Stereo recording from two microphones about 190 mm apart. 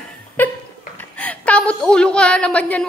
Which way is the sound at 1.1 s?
5° left (ahead or behind).